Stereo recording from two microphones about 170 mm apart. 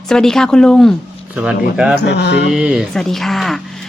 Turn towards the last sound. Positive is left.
turn(degrees=0)  # may be behind; listen again after turning